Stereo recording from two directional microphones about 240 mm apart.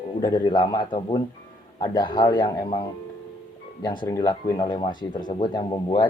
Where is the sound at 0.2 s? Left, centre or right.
Centre.